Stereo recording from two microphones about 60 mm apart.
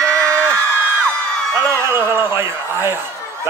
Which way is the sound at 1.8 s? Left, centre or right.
Right.